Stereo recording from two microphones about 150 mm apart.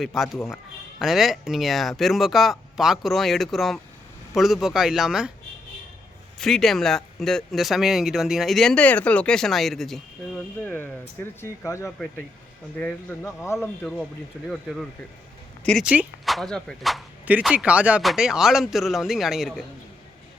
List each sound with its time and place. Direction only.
0.0 s speech: centre (ahead or behind)
6.4 s speech: centre (ahead or behind)
13.8 s speech: 5° left (ahead or behind)
17.2 s speech: 10° right (ahead or behind)